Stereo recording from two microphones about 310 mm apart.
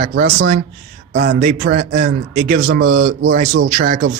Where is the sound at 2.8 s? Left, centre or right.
Right.